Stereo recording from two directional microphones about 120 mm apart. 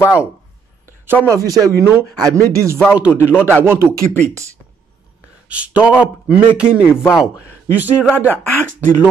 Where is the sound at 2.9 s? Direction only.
15° right (ahead or behind).